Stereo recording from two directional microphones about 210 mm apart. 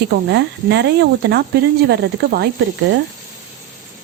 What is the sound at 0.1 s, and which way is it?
Speech, 55° right (ahead or behind).